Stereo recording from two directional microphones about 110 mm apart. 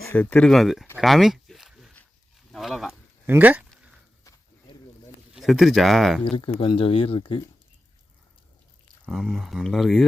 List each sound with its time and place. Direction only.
0.1 s speech: 15° left (ahead or behind)
0.9 s a sound: centre (ahead or behind)
2.5 s speech: centre (ahead or behind)
3.2 s speech: 15° right (ahead or behind)
5.3 s speech: 5° right (ahead or behind)
6.2 s speech: 55° left (ahead or behind)
9.0 s speech: centre (ahead or behind)